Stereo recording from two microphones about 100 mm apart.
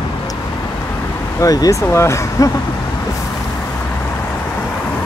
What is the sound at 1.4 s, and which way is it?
Speech, 35° left (ahead or behind).